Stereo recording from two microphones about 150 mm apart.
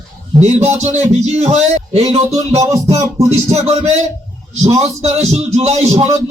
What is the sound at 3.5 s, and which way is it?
A man's voice, 45° right (ahead or behind).